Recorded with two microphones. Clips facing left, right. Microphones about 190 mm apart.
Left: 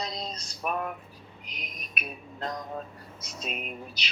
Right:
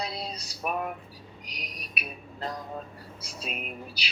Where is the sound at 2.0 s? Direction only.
10° right (ahead or behind).